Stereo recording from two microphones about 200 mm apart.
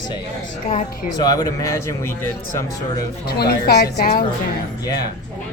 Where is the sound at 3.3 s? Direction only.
50° left (ahead or behind).